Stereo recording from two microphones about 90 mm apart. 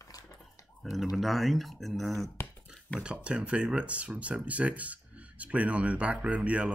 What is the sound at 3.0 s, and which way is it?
Speech, 10° right (ahead or behind).